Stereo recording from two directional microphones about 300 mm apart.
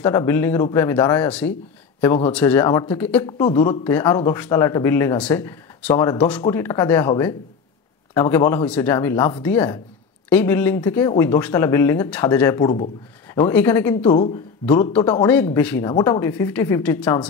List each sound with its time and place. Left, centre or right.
0.0 s speech: centre
14.0 s speech: centre